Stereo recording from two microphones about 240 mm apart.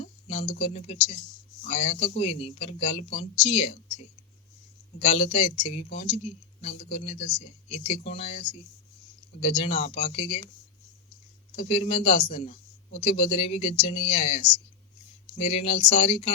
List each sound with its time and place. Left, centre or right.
0.0 s a sound: left
0.6 s speech: left
11.5 s speech: left